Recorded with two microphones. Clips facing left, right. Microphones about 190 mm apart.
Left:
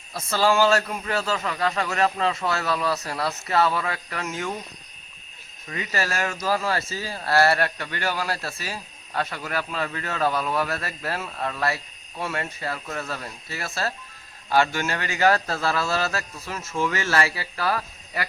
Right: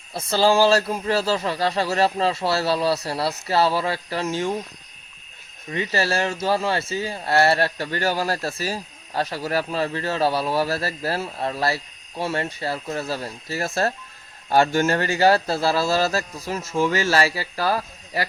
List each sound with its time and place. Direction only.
0.1 s speech: 30° right (ahead or behind)
5.7 s speech: 30° right (ahead or behind)